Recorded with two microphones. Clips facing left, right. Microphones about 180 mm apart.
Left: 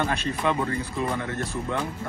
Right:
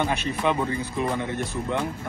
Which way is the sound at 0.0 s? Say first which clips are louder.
Right 1 dB; 20° right (ahead or behind).